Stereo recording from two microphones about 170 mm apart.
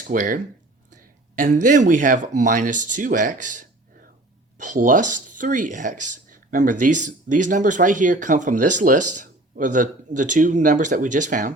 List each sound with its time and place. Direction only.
0.1 s speech: 50° right (ahead or behind)
1.4 s speech: 45° right (ahead or behind)